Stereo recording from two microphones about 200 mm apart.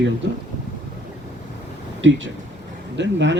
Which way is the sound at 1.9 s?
70° right (ahead or behind).